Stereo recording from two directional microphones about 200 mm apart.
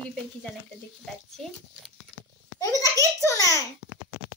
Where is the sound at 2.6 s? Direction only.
15° left (ahead or behind).